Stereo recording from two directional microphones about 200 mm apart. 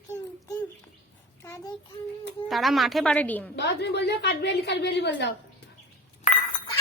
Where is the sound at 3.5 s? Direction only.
60° left (ahead or behind).